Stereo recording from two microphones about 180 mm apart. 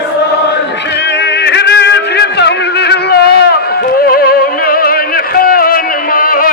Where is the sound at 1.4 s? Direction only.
70° left (ahead or behind).